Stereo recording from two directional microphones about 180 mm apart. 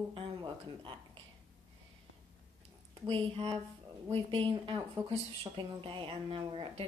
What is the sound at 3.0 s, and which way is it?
Speech, 30° right (ahead or behind).